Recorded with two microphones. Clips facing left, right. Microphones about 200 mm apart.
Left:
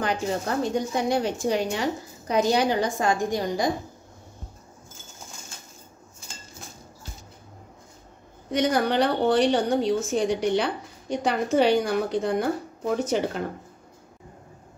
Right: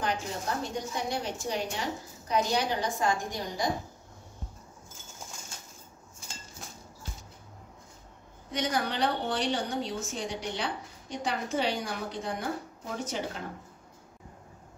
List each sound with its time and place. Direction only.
0.0 s a woman's voice: 85° left
8.5 s a woman's voice: 60° left (ahead or behind)